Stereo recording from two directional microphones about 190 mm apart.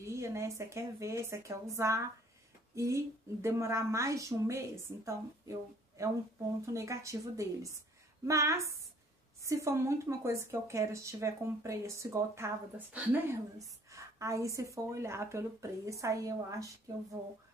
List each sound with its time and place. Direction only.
0.0 s a woman's voice: 15° right (ahead or behind)
2.7 s a sound: 15° right (ahead or behind)
3.4 s a woman's voice: 15° right (ahead or behind)